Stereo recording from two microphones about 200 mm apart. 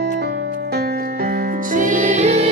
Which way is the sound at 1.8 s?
40° right (ahead or behind).